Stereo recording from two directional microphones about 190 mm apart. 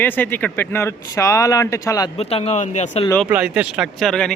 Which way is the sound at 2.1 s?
30° left (ahead or behind).